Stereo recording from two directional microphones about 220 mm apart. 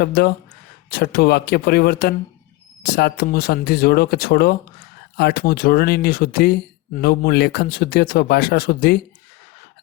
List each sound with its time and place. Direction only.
0.0 s speech: 45° left (ahead or behind)